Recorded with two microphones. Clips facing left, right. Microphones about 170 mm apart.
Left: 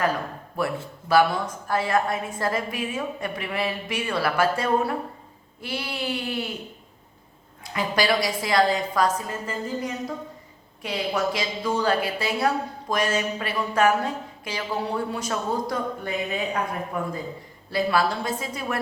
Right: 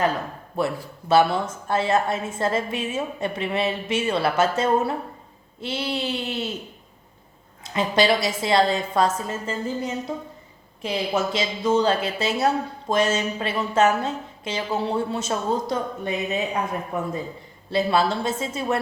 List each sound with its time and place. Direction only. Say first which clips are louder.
0.6 s a woman's voice: right 2 dB; 25° right (ahead or behind)
7.6 s a woman's voice: right 4 dB; 25° right (ahead or behind)